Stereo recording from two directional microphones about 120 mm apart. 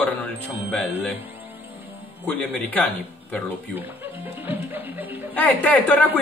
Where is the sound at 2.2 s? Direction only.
15° left (ahead or behind).